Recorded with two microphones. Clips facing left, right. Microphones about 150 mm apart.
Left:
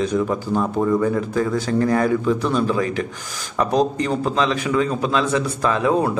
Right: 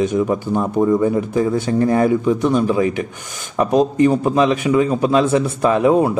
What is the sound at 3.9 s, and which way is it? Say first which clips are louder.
A man's voice: right 6 dB; 20° right (ahead or behind).